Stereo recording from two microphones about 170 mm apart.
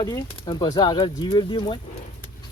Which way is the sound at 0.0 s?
25° left (ahead or behind).